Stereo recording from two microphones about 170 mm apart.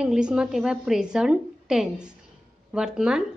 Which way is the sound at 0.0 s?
5° right (ahead or behind).